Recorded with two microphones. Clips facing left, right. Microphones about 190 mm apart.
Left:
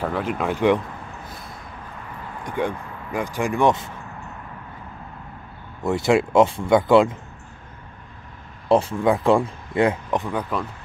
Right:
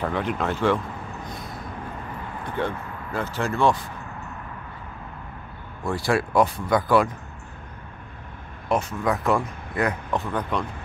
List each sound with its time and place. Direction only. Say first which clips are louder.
0.0 s speech: left 1 dB; 5° left (ahead or behind)
1.2 s a sound: right 3 dB; centre (ahead or behind)
2.4 s speech: left 3 dB; 15° left (ahead or behind)
5.9 s speech: left 5 dB; 20° left (ahead or behind)
8.6 s speech: left 6 dB; 30° left (ahead or behind)